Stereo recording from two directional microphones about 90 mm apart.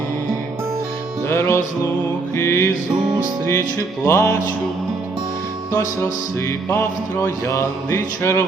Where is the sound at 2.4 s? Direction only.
30° left (ahead or behind).